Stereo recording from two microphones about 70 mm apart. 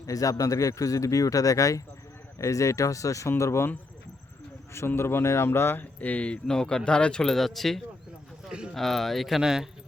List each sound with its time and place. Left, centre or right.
0.0 s speech: left
4.9 s speech: left
6.0 s speech: left; by 7.8 s centre
8.4 s speech: centre
8.7 s speech: centre